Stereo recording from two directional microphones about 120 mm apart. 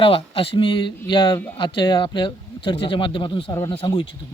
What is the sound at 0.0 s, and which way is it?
Speech, 50° left (ahead or behind).